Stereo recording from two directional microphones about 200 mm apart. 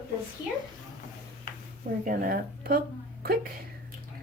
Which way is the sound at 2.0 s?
45° right (ahead or behind).